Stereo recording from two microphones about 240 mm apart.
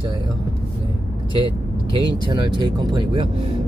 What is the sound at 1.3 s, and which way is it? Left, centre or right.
Vehicle, centre.